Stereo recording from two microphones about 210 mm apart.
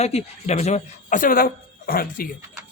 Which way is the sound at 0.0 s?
30° left (ahead or behind).